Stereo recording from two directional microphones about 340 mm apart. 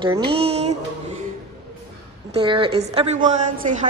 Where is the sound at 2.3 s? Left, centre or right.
Centre.